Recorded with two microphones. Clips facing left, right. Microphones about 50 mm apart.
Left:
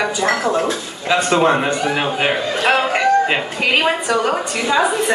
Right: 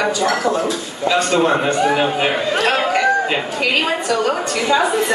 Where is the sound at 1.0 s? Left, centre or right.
Left.